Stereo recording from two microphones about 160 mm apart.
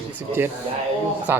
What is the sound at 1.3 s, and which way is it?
Speech, 15° right (ahead or behind).